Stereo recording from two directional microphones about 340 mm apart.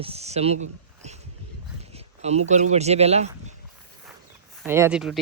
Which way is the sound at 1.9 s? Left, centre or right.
Centre.